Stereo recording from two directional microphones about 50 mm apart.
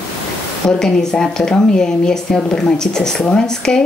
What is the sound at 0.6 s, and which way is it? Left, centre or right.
A woman's voice, centre.